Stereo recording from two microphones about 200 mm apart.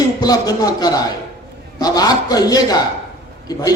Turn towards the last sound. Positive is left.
turn(degrees=20)  # may be behind; listen again after turning